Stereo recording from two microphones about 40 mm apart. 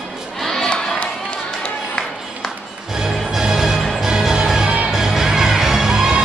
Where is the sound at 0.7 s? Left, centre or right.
Left.